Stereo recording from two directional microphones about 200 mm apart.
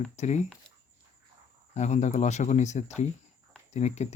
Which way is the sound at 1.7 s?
35° left (ahead or behind).